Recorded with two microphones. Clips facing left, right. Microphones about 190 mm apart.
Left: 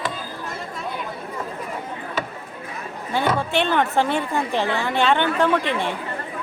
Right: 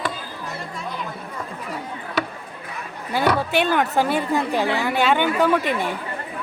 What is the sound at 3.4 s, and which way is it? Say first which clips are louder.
A woman's voice: right 1 dB; 5° right (ahead or behind).